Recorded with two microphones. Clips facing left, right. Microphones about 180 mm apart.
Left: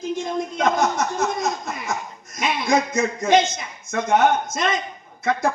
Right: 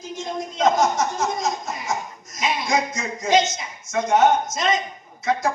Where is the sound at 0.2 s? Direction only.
55° left (ahead or behind).